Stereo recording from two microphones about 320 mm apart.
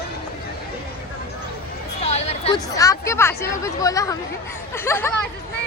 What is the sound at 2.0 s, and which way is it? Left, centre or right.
Speech, centre.